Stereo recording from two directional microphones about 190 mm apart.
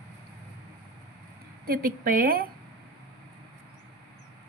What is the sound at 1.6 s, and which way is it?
Speech, 50° right (ahead or behind).